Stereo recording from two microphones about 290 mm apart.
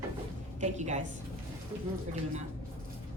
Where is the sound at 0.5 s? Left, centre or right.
Right.